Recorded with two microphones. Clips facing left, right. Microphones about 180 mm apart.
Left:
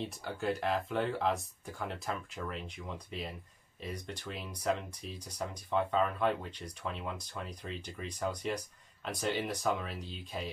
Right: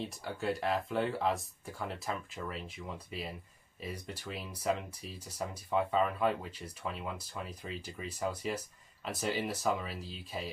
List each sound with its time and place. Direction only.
0.0 s speech: centre (ahead or behind)